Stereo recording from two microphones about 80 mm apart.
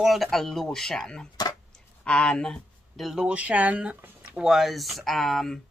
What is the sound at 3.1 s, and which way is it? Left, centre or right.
Speech, centre.